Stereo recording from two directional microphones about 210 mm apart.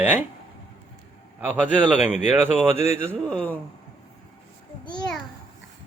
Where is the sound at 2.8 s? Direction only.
30° left (ahead or behind).